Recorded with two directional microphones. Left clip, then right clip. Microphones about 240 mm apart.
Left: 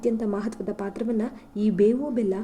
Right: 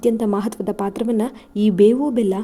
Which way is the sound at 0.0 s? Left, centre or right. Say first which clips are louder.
Right 7 dB; right.